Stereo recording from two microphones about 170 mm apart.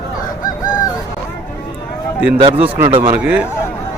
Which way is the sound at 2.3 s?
35° right (ahead or behind).